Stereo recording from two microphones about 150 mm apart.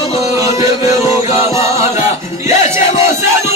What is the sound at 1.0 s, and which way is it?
Music, 20° right (ahead or behind).